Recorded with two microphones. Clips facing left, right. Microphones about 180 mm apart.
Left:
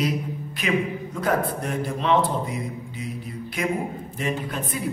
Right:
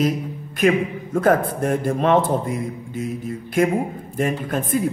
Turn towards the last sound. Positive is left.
turn(degrees=-50)  # may be behind; listen again after turning